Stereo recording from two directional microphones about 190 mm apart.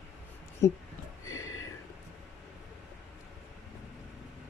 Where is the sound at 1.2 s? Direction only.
15° left (ahead or behind).